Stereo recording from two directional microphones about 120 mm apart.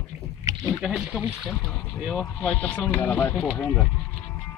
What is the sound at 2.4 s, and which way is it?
Speech, 15° left (ahead or behind).